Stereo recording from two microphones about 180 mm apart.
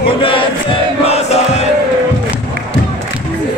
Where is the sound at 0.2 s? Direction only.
30° left (ahead or behind).